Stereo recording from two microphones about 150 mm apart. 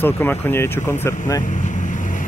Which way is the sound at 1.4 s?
55° left (ahead or behind).